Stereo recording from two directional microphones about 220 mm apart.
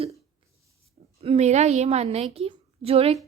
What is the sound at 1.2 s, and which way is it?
A woman's voice, 30° right (ahead or behind).